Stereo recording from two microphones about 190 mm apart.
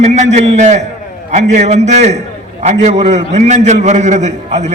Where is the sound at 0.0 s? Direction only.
35° right (ahead or behind).